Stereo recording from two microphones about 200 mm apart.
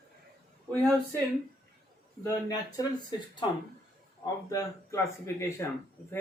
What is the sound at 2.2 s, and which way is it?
Speech, 15° left (ahead or behind).